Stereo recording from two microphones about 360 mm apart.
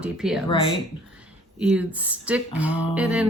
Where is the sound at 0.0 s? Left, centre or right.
Centre.